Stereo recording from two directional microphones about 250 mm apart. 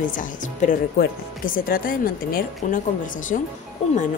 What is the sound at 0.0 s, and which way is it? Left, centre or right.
Speech, left.